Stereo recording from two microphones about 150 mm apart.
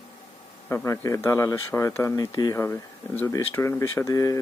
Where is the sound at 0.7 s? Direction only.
20° left (ahead or behind).